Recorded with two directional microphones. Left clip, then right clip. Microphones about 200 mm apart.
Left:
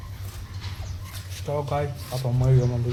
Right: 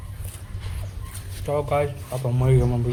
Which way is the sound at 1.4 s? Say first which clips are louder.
Right 4 dB; 15° right (ahead or behind).